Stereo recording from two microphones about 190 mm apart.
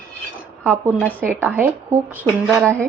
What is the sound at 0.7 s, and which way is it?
Speech, 10° left (ahead or behind).